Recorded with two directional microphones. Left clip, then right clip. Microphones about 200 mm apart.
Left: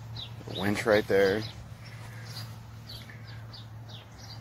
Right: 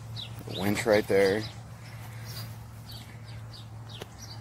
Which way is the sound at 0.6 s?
Centre (ahead or behind).